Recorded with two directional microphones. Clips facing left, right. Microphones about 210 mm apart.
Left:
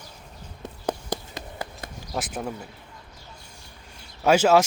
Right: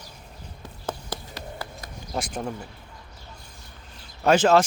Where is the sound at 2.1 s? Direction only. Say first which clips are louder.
Right 1 dB; 5° left (ahead or behind).